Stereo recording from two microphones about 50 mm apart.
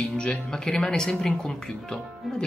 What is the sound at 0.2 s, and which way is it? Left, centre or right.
Speech, centre.